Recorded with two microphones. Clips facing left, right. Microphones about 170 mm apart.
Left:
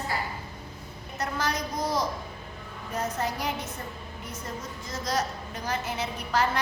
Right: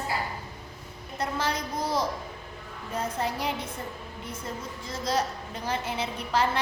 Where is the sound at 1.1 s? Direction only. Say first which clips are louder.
Even; 30° right (ahead or behind).